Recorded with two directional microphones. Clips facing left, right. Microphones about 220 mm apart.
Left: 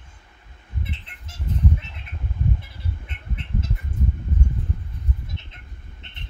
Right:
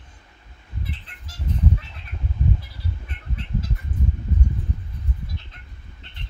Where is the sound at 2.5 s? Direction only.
25° left (ahead or behind).